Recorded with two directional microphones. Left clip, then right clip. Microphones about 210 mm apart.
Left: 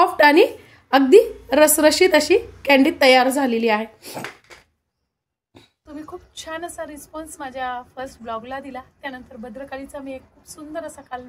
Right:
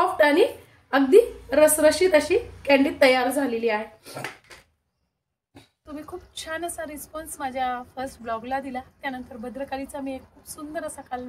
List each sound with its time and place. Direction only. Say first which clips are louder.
0.0 s a woman's voice: left 5 dB; 45° left (ahead or behind)
6.3 s a woman's voice: left 1 dB; 5° left (ahead or behind)